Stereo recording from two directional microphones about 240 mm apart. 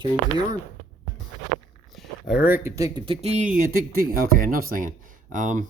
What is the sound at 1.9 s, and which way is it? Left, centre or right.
Speech, centre.